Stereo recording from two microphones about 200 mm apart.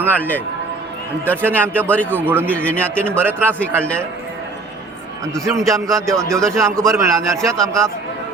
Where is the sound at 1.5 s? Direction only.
10° right (ahead or behind).